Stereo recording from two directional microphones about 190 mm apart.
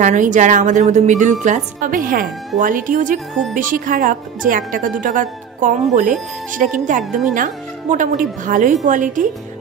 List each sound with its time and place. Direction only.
0.0 s a woman's voice: 40° right (ahead or behind)
7.0 s speech: centre (ahead or behind)
7.3 s speech: 45° right (ahead or behind)